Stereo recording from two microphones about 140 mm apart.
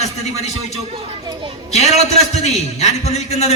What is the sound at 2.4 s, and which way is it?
A man's voice, 55° left (ahead or behind).